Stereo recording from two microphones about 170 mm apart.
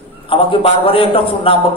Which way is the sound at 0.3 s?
35° left (ahead or behind).